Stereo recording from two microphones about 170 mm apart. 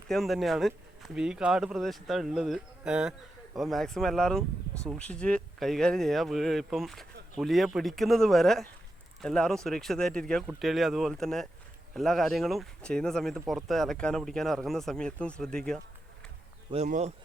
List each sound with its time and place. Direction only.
0.1 s speech: centre (ahead or behind)
16.7 s speech: 40° right (ahead or behind)